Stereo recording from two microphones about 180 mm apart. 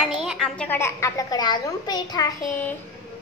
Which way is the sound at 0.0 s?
5° right (ahead or behind).